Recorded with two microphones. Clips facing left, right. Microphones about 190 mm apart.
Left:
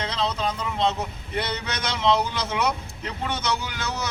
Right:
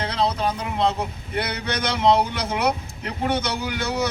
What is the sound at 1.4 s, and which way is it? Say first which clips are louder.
Speech: right 3 dB; 60° right (ahead or behind).